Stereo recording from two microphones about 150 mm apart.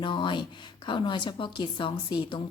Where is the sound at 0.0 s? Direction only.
35° left (ahead or behind).